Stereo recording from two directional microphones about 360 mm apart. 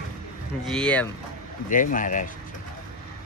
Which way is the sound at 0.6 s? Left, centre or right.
Centre.